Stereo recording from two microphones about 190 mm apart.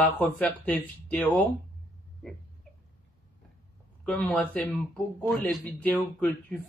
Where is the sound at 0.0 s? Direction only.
10° left (ahead or behind).